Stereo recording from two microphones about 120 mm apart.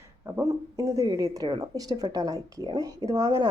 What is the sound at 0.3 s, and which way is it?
Speech, 25° right (ahead or behind).